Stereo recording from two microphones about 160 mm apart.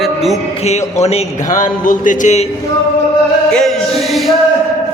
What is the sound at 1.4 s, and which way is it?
A man's voice, 55° left (ahead or behind).